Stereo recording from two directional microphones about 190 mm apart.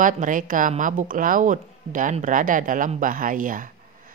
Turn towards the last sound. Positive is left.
turn(degrees=-45)  # may be behind; listen again after turning